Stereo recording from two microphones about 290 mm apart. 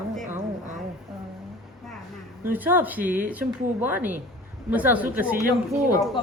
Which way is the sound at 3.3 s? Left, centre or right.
Centre.